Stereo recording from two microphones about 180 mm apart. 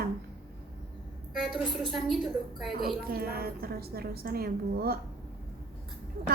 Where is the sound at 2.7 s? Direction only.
55° right (ahead or behind).